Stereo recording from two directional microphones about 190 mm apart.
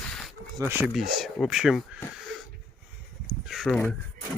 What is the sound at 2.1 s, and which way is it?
Wheeze, centre (ahead or behind).